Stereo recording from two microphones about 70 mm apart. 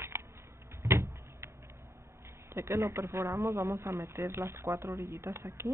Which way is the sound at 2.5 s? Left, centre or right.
Right.